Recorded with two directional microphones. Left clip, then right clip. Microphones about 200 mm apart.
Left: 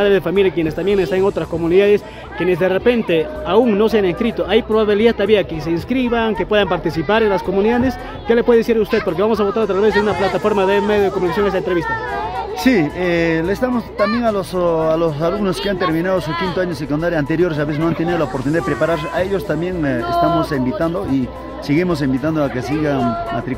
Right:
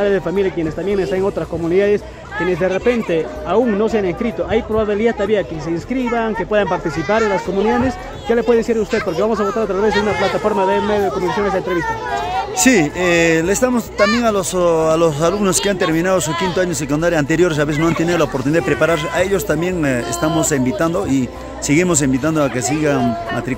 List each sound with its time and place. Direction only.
0.0 s speech: 10° left (ahead or behind)
12.6 s a man's voice: 5° right (ahead or behind)
13.9 s speech: 30° right (ahead or behind)
14.2 s a man's voice: 10° right (ahead or behind)